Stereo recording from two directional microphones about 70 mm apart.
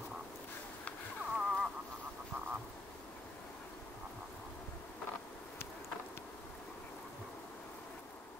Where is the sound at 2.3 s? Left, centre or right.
Centre.